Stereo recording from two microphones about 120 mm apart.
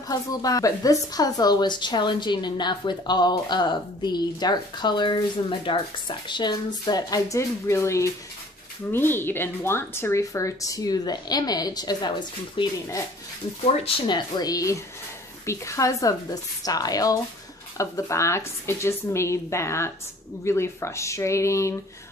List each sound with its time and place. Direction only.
0.1 s a woman's voice: 30° left (ahead or behind)